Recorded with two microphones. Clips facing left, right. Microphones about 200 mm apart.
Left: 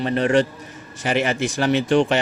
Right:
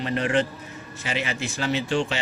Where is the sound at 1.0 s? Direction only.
50° left (ahead or behind).